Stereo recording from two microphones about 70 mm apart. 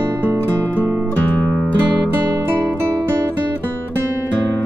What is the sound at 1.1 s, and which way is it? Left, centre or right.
Music, left.